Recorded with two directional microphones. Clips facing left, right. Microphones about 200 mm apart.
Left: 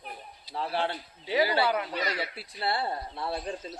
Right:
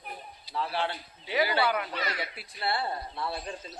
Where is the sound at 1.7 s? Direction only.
25° left (ahead or behind).